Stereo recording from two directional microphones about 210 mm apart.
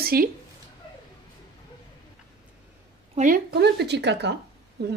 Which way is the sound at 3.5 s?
55° right (ahead or behind).